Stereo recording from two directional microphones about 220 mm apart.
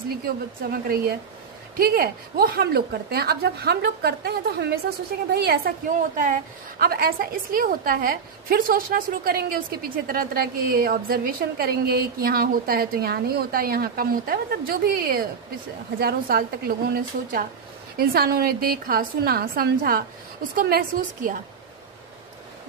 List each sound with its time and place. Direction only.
0.7 s a woman's voice: 45° right (ahead or behind)
6.8 s a woman's voice: 45° right (ahead or behind)